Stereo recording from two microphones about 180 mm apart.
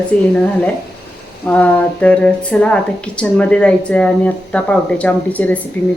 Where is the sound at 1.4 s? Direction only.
10° left (ahead or behind).